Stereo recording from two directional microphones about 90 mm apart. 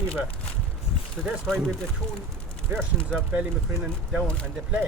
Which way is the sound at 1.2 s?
5° left (ahead or behind).